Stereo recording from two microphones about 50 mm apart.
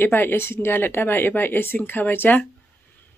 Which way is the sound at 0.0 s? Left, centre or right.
Left.